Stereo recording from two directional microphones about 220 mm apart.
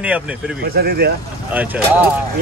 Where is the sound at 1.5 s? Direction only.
10° right (ahead or behind).